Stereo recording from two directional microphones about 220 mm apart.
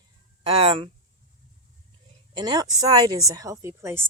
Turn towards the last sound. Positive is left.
turn(degrees=-10)  # may be behind; listen again after turning